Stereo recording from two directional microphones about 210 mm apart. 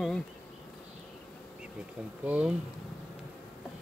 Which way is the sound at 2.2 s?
5° right (ahead or behind).